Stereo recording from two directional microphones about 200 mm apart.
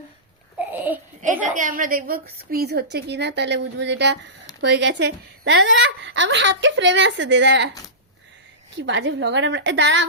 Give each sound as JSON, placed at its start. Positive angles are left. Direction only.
{"t": 0.7, "sound": "a sound", "side_deg": -10}
{"t": 1.2, "sound": "a woman's voice", "side_deg": -40}
{"t": 8.8, "sound": "a woman's voice", "side_deg": -65}